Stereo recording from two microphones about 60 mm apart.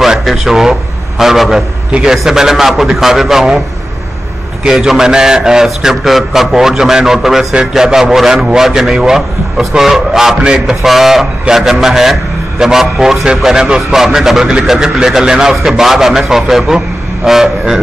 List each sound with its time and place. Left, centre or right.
0.0 s a man's voice: centre
1.9 s a man's voice: centre
4.6 s a man's voice: centre